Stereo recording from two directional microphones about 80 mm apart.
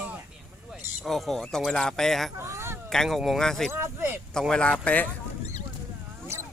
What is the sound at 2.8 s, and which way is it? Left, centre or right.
Speech, centre.